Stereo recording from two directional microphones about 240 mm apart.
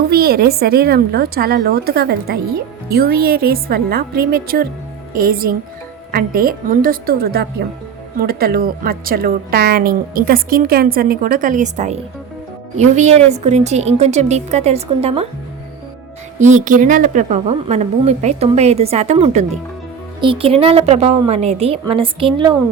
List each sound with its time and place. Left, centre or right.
0.1 s a woman's voice: right
16.4 s a woman's voice: right